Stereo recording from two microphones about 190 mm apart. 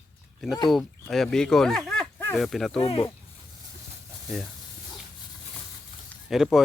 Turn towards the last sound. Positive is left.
turn(degrees=0)  # may be behind; listen again after turning